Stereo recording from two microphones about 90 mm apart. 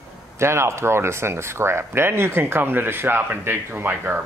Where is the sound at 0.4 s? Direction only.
30° right (ahead or behind).